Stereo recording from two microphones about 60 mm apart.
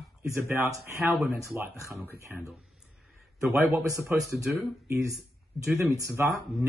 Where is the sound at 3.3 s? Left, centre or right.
Right.